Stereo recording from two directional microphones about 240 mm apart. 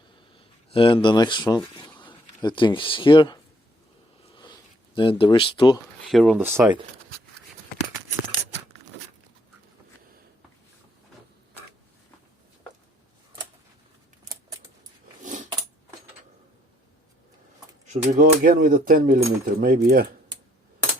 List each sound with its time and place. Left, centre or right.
0.7 s speech: left
4.9 s speech: left
6.1 s speech: centre
15.2 s a sound: right
17.9 s speech: right